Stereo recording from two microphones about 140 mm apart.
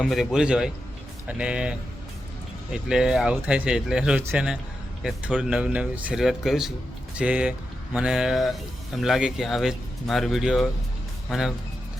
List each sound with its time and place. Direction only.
0.0 s speech: centre (ahead or behind)
2.9 s speech: 5° right (ahead or behind)
4.2 s speech: 15° right (ahead or behind)
5.0 s speech: 5° right (ahead or behind)